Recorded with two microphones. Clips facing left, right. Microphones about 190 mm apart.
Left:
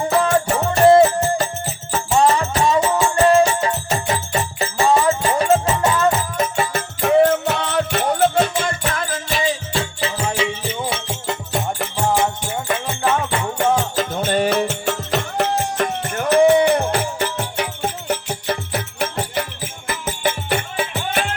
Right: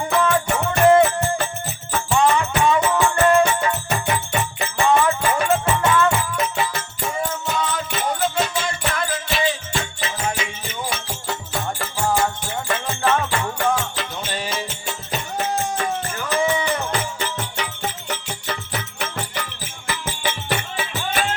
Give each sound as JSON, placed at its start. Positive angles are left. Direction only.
{"t": 0.1, "sound": "music", "side_deg": 35}
{"t": 7.0, "sound": "music", "side_deg": 65}
{"t": 9.3, "sound": "music", "side_deg": 35}
{"t": 13.9, "sound": "music", "side_deg": 45}